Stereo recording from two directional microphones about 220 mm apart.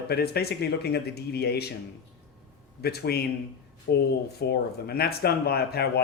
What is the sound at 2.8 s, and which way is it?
Speech, 45° left (ahead or behind).